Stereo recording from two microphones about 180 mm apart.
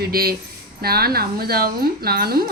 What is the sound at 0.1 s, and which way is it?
Speech, 60° right (ahead or behind).